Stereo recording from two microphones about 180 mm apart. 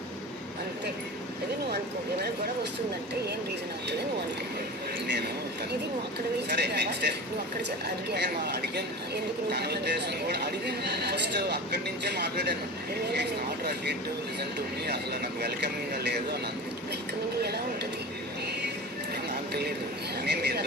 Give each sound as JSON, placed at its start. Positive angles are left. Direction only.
{"t": 6.5, "sound": "speech", "side_deg": -65}
{"t": 8.1, "sound": "speech", "side_deg": -65}
{"t": 14.8, "sound": "speech", "side_deg": -65}
{"t": 20.2, "sound": "speech", "side_deg": -65}